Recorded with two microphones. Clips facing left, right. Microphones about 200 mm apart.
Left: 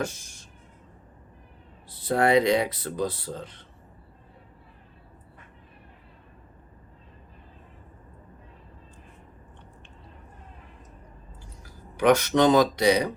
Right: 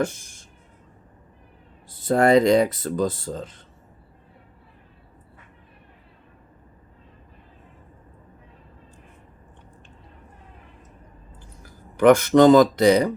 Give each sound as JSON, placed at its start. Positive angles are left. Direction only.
{"t": 1.9, "sound": "speech", "side_deg": -45}
{"t": 11.6, "sound": "speech", "side_deg": -50}